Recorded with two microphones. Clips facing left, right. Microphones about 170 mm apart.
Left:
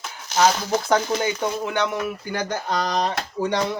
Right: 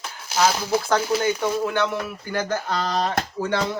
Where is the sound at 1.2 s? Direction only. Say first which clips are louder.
Right 2 dB; 15° left (ahead or behind).